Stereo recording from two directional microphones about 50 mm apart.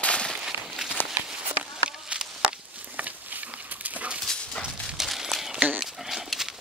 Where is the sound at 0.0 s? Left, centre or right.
Left.